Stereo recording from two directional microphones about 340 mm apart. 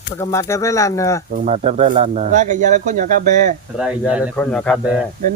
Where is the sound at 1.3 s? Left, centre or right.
Right.